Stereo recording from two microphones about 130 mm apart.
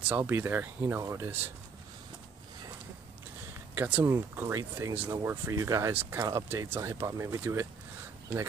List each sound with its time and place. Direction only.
0.1 s speech: 15° right (ahead or behind)
3.7 s speech: 15° right (ahead or behind)